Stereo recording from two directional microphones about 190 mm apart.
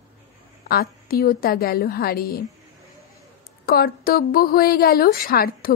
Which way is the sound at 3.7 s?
50° left (ahead or behind).